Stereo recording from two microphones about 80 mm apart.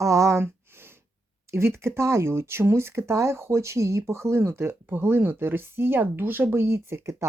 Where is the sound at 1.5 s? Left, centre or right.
Right.